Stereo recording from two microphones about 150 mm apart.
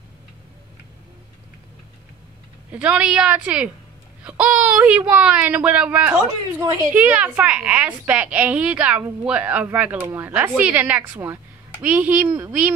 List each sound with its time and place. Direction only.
2.7 s a woman's voice: 10° right (ahead or behind)
6.2 s a woman's voice: 20° right (ahead or behind)
6.9 s a woman's voice: 10° right (ahead or behind)